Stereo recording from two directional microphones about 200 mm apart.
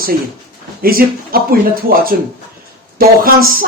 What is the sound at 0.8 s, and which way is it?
Speech, 45° right (ahead or behind).